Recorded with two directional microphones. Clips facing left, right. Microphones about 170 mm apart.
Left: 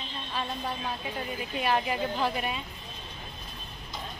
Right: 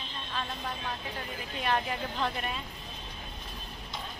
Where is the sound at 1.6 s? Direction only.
5° left (ahead or behind).